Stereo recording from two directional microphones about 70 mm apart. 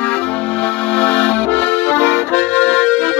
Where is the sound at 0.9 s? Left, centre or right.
Left.